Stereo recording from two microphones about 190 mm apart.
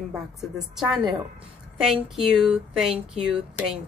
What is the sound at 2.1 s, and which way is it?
A woman's voice, centre (ahead or behind).